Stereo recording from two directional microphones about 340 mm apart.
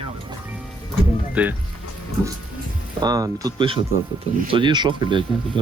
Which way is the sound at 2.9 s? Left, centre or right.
Centre.